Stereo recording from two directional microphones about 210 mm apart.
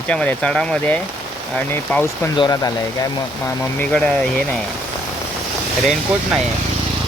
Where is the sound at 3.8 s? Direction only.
5° left (ahead or behind).